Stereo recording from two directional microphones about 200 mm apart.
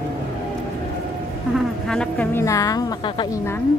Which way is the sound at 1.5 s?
5° left (ahead or behind).